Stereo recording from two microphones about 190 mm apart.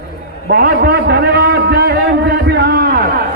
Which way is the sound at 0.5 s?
60° right (ahead or behind).